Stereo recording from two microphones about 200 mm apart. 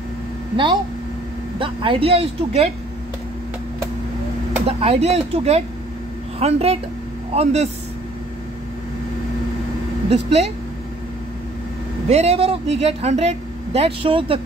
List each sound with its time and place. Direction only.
1.6 s speech: 25° right (ahead or behind)
4.6 s speech: 30° right (ahead or behind)
10.0 s speech: 30° right (ahead or behind)
12.1 s speech: 30° right (ahead or behind)